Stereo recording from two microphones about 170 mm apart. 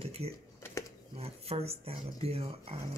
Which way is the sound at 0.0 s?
35° right (ahead or behind).